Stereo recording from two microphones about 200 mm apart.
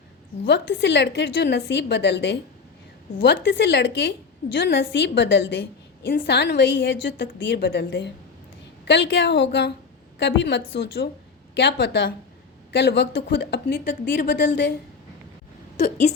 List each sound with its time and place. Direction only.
0.4 s a woman's voice: 60° left (ahead or behind)
15.8 s speech: 35° left (ahead or behind)